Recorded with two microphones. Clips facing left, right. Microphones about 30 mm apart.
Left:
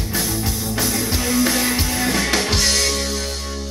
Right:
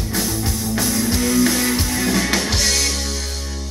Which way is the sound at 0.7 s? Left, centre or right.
Centre.